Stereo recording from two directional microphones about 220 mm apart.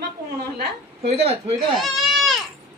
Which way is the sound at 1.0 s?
30° right (ahead or behind).